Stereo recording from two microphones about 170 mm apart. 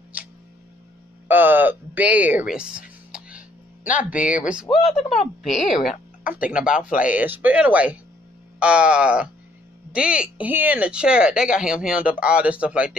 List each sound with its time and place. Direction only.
1.2 s music: 10° right (ahead or behind)
3.8 s speech: 50° left (ahead or behind)
4.1 s speech: 10° right (ahead or behind)
4.7 s speech: 35° left (ahead or behind)
5.9 s speech: 10° right (ahead or behind)